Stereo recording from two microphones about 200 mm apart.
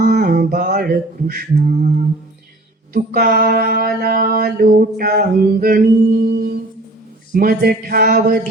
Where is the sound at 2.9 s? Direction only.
45° right (ahead or behind).